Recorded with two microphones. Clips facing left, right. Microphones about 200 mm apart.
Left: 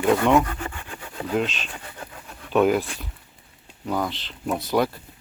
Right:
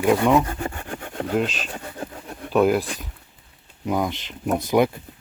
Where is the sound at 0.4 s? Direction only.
30° right (ahead or behind).